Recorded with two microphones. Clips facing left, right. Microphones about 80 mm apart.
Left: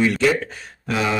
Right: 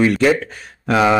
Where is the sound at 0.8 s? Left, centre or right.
Right.